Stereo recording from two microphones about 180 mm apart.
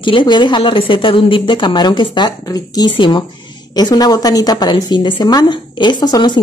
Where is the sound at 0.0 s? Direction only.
25° left (ahead or behind).